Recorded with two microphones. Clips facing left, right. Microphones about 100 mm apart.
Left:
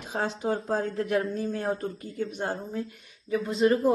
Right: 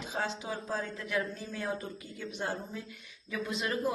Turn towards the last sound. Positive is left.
turn(degrees=35)  # may be behind; listen again after turning